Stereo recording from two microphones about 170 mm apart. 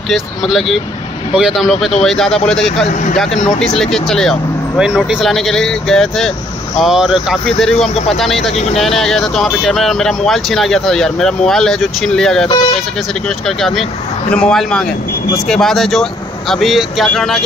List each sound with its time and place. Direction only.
0.1 s speech: centre (ahead or behind)
2.8 s speech: 50° left (ahead or behind)
3.4 s speech: 5° left (ahead or behind)
13.5 s speech: centre (ahead or behind)